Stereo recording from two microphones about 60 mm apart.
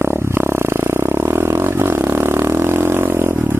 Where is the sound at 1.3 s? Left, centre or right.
Right.